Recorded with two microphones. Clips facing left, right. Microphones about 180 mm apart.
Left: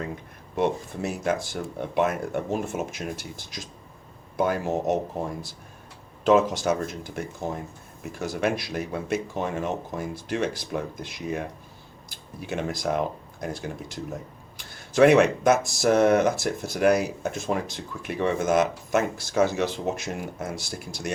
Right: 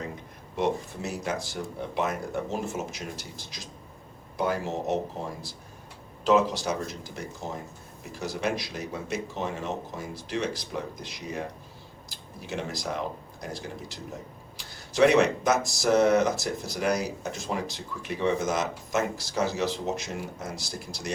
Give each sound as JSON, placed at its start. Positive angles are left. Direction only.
{"t": 0.5, "sound": "speech", "side_deg": 55}
{"t": 6.2, "sound": "speech", "side_deg": 50}